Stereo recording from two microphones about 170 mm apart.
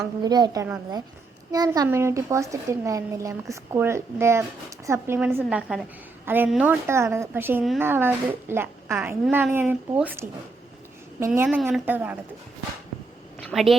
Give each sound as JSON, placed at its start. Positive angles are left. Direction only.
{"t": 0.0, "sound": "a woman's voice", "side_deg": -25}
{"t": 11.3, "sound": "a woman's voice", "side_deg": -5}
{"t": 13.4, "sound": "a woman's voice", "side_deg": 0}